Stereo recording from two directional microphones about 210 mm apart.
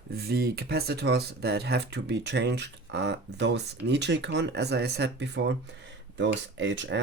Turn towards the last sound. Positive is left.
turn(degrees=-60)  # may be behind; listen again after turning